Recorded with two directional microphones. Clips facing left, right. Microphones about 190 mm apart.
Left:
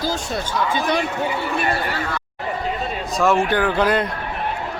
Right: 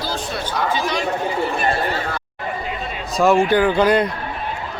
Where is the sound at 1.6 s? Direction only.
35° right (ahead or behind).